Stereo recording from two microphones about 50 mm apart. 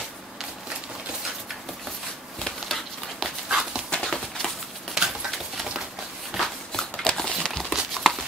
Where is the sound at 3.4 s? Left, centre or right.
Centre.